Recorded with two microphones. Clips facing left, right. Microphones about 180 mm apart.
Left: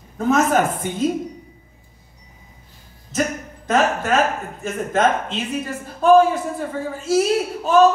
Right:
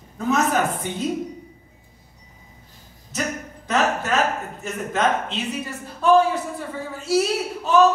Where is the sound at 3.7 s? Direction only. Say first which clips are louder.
Left 3 dB; 50° left (ahead or behind).